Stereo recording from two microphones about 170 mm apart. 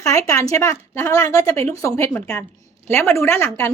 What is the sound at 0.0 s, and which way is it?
Speech, 20° left (ahead or behind).